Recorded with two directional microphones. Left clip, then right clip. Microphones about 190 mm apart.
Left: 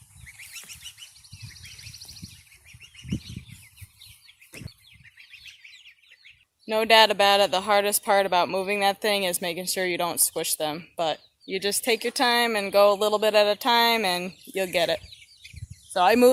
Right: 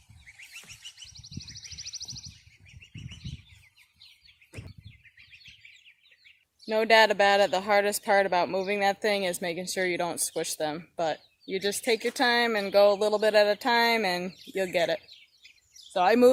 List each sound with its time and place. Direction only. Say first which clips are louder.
0.3 s goose: left 3 dB; centre (ahead or behind)
4.6 s bird: left 4 dB; centre (ahead or behind)
6.7 s speech: left 3 dB; 10° left (ahead or behind)